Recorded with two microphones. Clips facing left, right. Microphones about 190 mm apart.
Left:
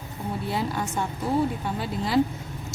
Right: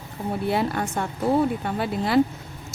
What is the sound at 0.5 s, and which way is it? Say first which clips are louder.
Speech: right 2 dB; 60° right (ahead or behind).